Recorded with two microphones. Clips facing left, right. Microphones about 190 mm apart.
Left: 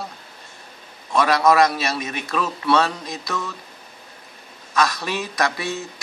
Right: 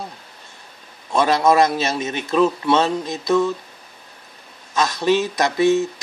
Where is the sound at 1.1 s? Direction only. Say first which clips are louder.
Right 1 dB; 25° right (ahead or behind).